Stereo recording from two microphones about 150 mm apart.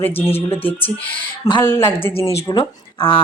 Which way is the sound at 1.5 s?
25° left (ahead or behind).